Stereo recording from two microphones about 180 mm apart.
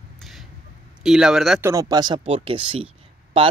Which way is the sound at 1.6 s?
15° right (ahead or behind).